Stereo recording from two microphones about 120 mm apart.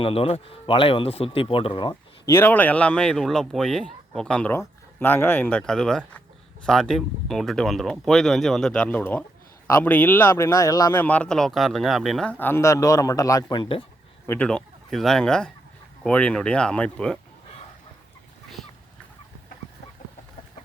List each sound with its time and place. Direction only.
0.0 s speech: 50° left (ahead or behind)
2.2 s speech: 20° left (ahead or behind)
10.9 s speech: 15° left (ahead or behind); by 13.6 s 30° left (ahead or behind)
13.6 s speech: 45° left (ahead or behind)
14.3 s speech: 10° left (ahead or behind)